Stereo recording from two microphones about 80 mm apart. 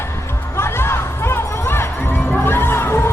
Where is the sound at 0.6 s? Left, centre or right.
Left.